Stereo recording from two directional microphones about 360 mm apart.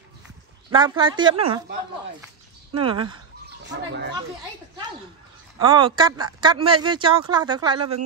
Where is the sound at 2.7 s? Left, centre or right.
Centre.